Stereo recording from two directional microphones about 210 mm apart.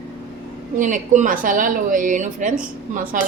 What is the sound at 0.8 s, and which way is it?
A woman's voice, 40° right (ahead or behind).